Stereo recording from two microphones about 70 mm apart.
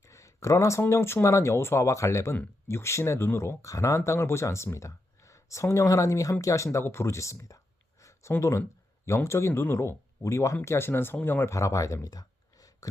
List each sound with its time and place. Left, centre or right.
0.0 s speech: left
11.5 s speech: left
12.0 s a sound: left